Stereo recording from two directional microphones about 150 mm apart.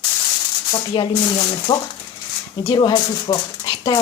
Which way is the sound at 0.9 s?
30° left (ahead or behind).